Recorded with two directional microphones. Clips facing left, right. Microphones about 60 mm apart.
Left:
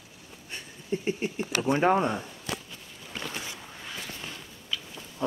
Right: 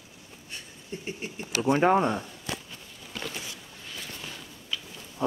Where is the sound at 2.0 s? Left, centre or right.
Centre.